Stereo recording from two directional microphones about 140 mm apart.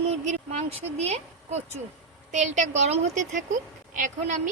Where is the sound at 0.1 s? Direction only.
50° right (ahead or behind).